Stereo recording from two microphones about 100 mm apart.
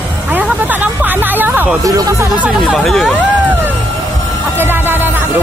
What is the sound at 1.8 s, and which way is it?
Speech, 35° right (ahead or behind).